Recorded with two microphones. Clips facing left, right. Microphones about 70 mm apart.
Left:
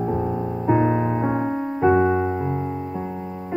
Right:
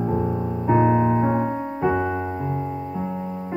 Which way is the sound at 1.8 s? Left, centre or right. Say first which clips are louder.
Left 6 dB; centre.